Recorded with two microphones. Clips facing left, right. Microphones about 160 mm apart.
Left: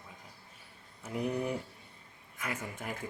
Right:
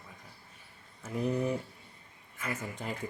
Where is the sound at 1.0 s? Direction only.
15° left (ahead or behind).